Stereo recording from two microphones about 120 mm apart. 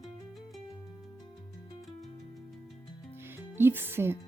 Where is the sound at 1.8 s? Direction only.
Centre (ahead or behind).